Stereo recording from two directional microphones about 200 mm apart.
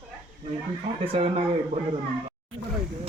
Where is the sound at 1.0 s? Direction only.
30° right (ahead or behind).